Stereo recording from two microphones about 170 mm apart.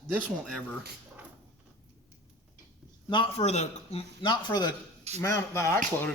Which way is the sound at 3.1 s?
35° left (ahead or behind).